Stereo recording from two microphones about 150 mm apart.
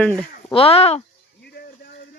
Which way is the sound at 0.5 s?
40° left (ahead or behind).